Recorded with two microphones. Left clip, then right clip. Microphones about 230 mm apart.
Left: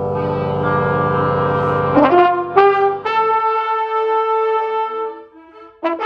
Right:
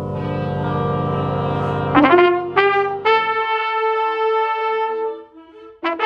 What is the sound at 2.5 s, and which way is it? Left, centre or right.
Trumpet, right.